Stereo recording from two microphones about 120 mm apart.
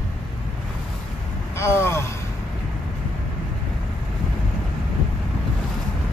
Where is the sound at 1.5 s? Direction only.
20° left (ahead or behind).